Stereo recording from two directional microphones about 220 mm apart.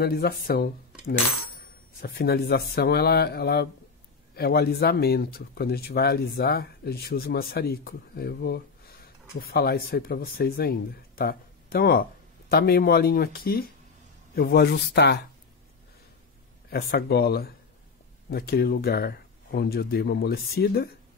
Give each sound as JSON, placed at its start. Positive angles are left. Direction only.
{"t": 0.0, "sound": "speech", "side_deg": 45}
{"t": 2.0, "sound": "speech", "side_deg": 45}
{"t": 16.7, "sound": "speech", "side_deg": 45}